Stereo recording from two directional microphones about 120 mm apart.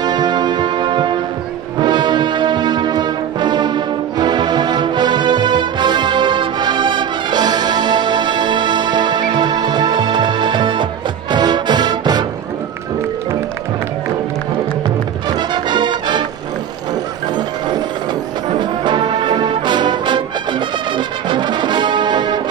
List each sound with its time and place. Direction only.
0.0 s music: 35° right (ahead or behind)
1.8 s brass instrument: 40° right (ahead or behind)
15.2 s music: 35° right (ahead or behind)
17.4 s music: 35° right (ahead or behind)
18.6 s brass instrument: 40° right (ahead or behind)